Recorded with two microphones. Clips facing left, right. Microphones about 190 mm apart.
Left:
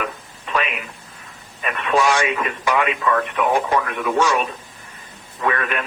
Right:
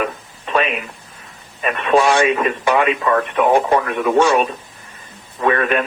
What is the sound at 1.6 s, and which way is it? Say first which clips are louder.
Speech: right 4 dB; 30° right (ahead or behind).